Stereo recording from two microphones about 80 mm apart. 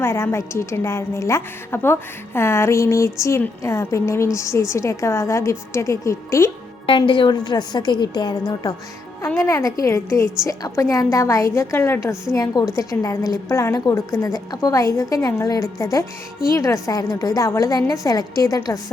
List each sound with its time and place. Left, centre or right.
0.0 s a woman's voice: left
6.8 s a woman's voice: left
9.4 s a woman's voice: left
12.3 s a woman's voice: left
14.3 s a woman's voice: left